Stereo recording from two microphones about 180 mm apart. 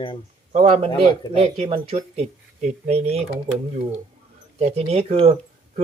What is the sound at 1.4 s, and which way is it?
Speech, 35° right (ahead or behind).